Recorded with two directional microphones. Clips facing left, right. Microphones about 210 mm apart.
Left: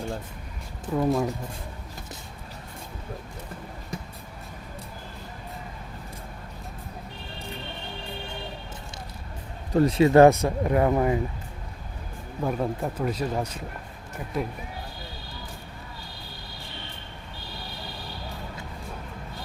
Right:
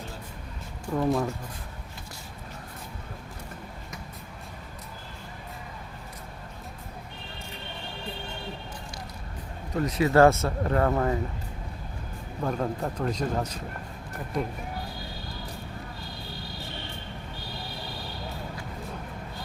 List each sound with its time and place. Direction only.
0.9 s speech: 10° left (ahead or behind)
9.7 s speech: 30° left (ahead or behind)
10.1 s speech: 15° left (ahead or behind)
12.4 s speech: 5° left (ahead or behind)